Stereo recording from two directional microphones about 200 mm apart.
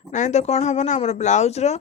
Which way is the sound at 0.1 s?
35° left (ahead or behind).